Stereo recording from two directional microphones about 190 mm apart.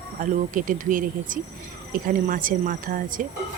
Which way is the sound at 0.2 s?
45° right (ahead or behind).